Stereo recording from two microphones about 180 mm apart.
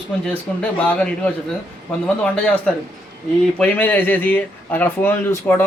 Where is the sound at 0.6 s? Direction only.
5° left (ahead or behind).